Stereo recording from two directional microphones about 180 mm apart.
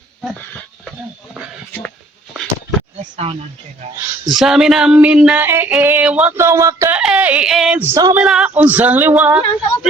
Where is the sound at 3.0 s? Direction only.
30° right (ahead or behind).